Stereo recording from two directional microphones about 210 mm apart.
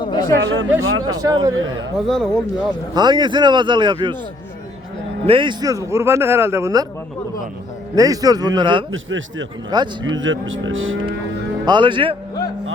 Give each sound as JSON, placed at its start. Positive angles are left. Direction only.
{"t": 0.0, "sound": "a sound", "side_deg": 20}
{"t": 0.4, "sound": "speech", "side_deg": -60}
{"t": 0.9, "sound": "livestock", "side_deg": -70}
{"t": 1.1, "sound": "speech", "side_deg": -20}
{"t": 1.5, "sound": "livestock", "side_deg": -65}
{"t": 2.0, "sound": "speech", "side_deg": 0}
{"t": 2.9, "sound": "a man's voice", "side_deg": -20}
{"t": 5.2, "sound": "speech", "side_deg": -25}
{"t": 7.9, "sound": "a man's voice", "side_deg": -15}
{"t": 8.9, "sound": "livestock", "side_deg": -65}
{"t": 9.6, "sound": "a man's voice", "side_deg": -20}
{"t": 10.0, "sound": "livestock", "side_deg": -65}
{"t": 11.6, "sound": "a man's voice", "side_deg": -20}